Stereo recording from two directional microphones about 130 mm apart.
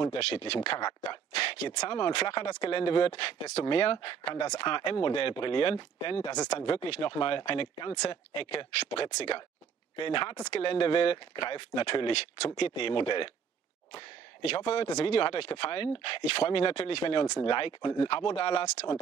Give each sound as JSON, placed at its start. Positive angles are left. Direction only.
{"t": 0.2, "sound": "speech", "side_deg": 50}
{"t": 0.7, "sound": "speech", "side_deg": 30}
{"t": 1.3, "sound": "a sound", "side_deg": 40}
{"t": 1.8, "sound": "speech", "side_deg": 35}
{"t": 6.5, "sound": "speech", "side_deg": 50}
{"t": 13.9, "sound": "speech", "side_deg": 55}